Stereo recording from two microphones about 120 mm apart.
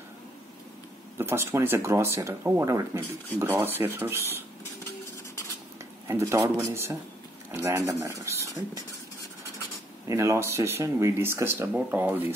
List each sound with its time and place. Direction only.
1.1 s speech: 20° right (ahead or behind)
6.0 s speech: 25° right (ahead or behind)
10.0 s speech: 25° right (ahead or behind)